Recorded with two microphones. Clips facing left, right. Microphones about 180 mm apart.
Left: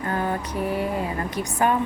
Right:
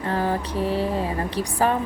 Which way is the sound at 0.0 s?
30° right (ahead or behind).